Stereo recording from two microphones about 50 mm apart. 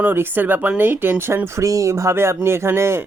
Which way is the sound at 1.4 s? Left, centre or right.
Right.